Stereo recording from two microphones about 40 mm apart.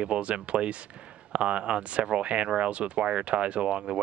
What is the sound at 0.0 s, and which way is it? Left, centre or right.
Speech, right.